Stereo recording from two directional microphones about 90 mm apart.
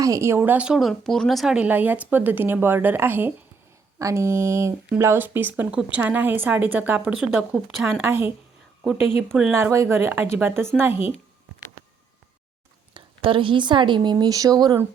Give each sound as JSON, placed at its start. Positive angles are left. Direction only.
{"t": 0.0, "sound": "speech", "side_deg": -35}
{"t": 0.8, "sound": "speech", "side_deg": 0}
{"t": 1.5, "sound": "speech", "side_deg": -20}
{"t": 8.0, "sound": "speech", "side_deg": -25}
{"t": 8.9, "sound": "speech", "side_deg": -5}
{"t": 9.6, "sound": "speech", "side_deg": -30}
{"t": 12.9, "sound": "a woman's voice", "side_deg": -70}